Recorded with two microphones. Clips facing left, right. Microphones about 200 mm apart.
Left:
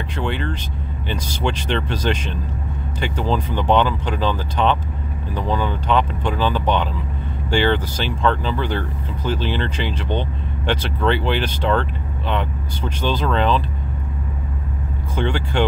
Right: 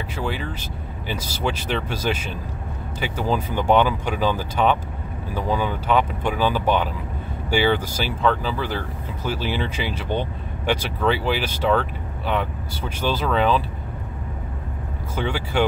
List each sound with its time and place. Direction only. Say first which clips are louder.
0.1 s speech: left 4 dB; 5° right (ahead or behind)
15.1 s speech: left 2 dB; 5° right (ahead or behind)